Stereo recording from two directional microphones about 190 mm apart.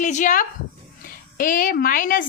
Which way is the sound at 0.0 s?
40° left (ahead or behind).